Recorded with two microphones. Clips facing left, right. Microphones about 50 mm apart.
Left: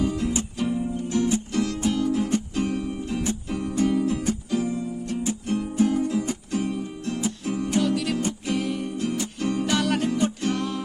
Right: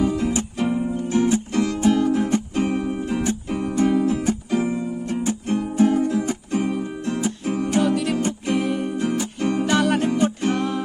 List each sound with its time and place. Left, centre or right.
0.1 s music: right
4.5 s music: right
5.8 s music: right